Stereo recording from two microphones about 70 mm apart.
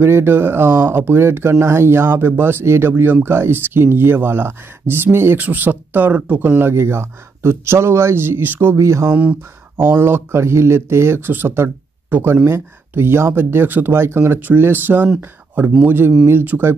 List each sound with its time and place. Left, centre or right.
0.0 s speech: right
6.6 s speech: right
8.7 s speech: right
9.1 s speech: centre
9.8 s speech: right